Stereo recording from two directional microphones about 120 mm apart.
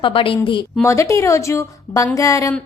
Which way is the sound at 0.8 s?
25° left (ahead or behind).